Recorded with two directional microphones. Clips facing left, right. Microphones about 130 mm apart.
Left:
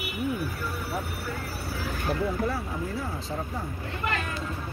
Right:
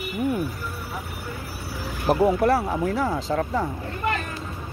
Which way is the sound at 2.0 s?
80° right.